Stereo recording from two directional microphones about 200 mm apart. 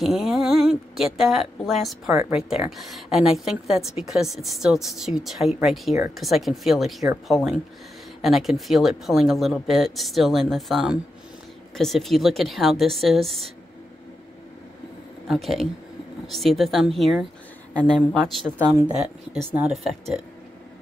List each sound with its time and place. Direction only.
0.0 s speech: centre (ahead or behind)
8.2 s speech: centre (ahead or behind)
15.2 s speech: centre (ahead or behind)
18.6 s speech: 15° right (ahead or behind)
18.9 s speech: 5° right (ahead or behind)